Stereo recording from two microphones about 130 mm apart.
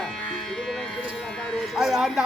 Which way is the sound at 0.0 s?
5° left (ahead or behind).